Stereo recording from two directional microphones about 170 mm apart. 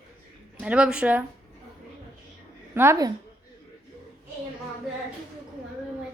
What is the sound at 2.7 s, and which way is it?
Speech, 15° right (ahead or behind).